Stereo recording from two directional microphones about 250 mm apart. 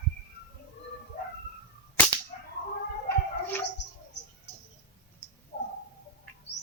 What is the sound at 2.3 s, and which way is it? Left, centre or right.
Whip, left.